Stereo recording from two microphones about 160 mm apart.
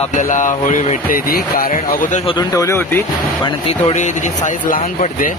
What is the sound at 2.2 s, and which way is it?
Speech, 25° left (ahead or behind).